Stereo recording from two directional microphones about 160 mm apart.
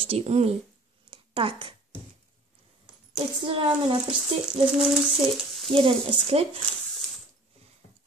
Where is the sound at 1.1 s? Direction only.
30° right (ahead or behind).